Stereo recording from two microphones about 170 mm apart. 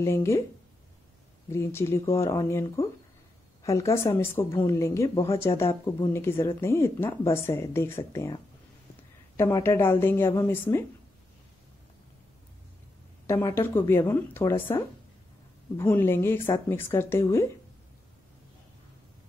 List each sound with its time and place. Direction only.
0.0 s a woman's voice: 15° left (ahead or behind)
1.5 s a woman's voice: 15° left (ahead or behind)
9.4 s a woman's voice: 15° left (ahead or behind)
13.3 s a woman's voice: 15° left (ahead or behind)
15.8 s a woman's voice: 10° left (ahead or behind)